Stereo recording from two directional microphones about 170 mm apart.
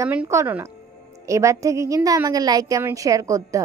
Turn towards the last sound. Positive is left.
turn(degrees=-20)  # may be behind; listen again after turning